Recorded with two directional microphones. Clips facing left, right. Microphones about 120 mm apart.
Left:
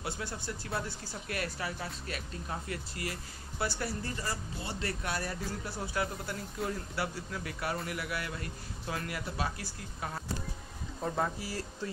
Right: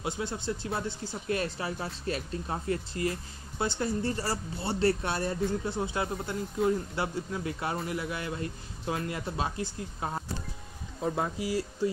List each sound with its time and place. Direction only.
0.0 s speech: 20° right (ahead or behind)
4.2 s speech: 35° right (ahead or behind)
11.1 s speech: 15° right (ahead or behind)